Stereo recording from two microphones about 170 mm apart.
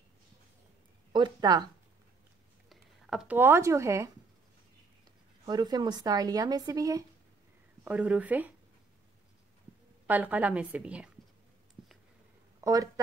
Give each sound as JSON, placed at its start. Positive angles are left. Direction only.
{"t": 1.1, "sound": "speech", "side_deg": -25}
{"t": 2.7, "sound": "speech", "side_deg": -5}
{"t": 5.4, "sound": "speech", "side_deg": -25}
{"t": 7.8, "sound": "a woman's voice", "side_deg": -10}
{"t": 10.0, "sound": "a woman's voice", "side_deg": -10}
{"t": 12.5, "sound": "a sound", "side_deg": -20}